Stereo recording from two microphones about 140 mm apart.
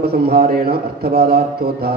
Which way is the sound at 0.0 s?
90° right.